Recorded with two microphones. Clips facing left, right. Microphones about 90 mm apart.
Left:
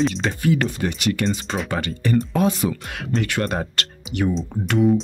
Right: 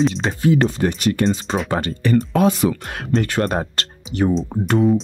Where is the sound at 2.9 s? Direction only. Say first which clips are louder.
Right 3 dB; 40° right (ahead or behind).